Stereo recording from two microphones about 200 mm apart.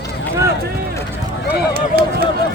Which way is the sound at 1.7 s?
50° right (ahead or behind).